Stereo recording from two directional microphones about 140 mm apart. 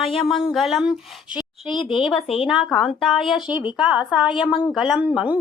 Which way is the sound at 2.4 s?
Centre (ahead or behind).